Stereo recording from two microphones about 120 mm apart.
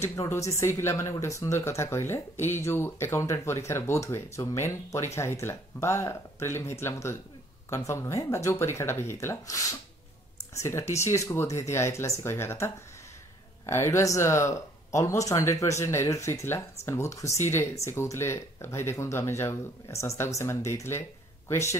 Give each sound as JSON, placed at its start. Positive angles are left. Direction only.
{"t": 0.0, "sound": "speech", "side_deg": 20}